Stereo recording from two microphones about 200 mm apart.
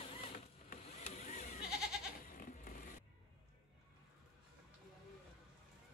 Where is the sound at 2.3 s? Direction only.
45° left (ahead or behind).